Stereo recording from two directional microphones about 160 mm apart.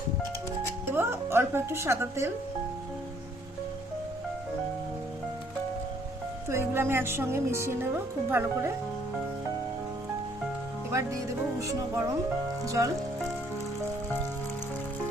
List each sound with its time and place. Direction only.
0.9 s speech: 15° right (ahead or behind)
6.5 s speech: 15° right (ahead or behind)
10.9 s speech: 20° right (ahead or behind)